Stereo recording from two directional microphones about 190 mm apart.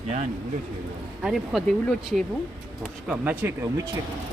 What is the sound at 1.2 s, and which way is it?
Speech, centre (ahead or behind).